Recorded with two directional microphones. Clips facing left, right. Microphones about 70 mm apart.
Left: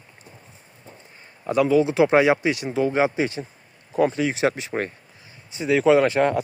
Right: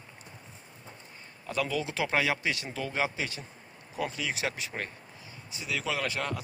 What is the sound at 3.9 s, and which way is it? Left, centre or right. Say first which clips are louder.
Speech: left 12 dB; left.